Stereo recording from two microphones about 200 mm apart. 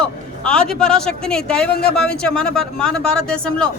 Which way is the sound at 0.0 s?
5° left (ahead or behind).